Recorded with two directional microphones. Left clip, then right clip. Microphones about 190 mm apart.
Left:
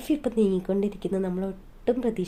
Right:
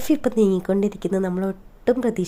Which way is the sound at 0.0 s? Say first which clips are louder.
Right 5 dB; 25° right (ahead or behind).